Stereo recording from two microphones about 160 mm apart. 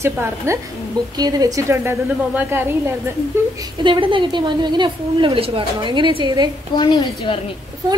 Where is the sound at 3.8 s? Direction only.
30° right (ahead or behind).